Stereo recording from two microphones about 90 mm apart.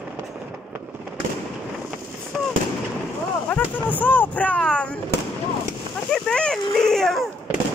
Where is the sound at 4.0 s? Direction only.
20° left (ahead or behind).